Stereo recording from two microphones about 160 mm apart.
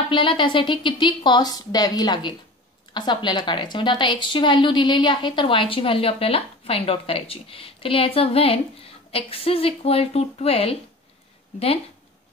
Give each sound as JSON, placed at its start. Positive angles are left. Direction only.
{"t": 0.1, "sound": "a woman's voice", "side_deg": 30}